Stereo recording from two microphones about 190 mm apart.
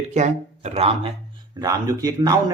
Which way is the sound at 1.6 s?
20° right (ahead or behind).